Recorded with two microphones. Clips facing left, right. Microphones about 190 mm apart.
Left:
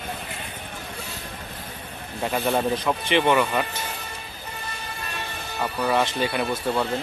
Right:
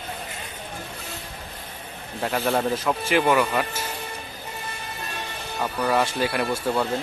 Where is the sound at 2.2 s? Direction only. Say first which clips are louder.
Even; centre (ahead or behind).